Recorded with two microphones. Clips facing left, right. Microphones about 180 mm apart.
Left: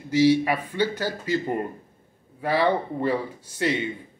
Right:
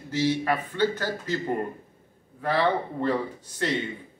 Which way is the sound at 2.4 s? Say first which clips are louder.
Left 2 dB; 10° left (ahead or behind).